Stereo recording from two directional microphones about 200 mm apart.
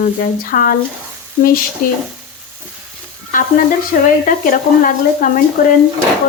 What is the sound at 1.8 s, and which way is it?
Speech, 40° left (ahead or behind).